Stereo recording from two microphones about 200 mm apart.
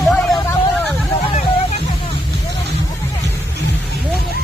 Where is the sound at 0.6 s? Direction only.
10° left (ahead or behind).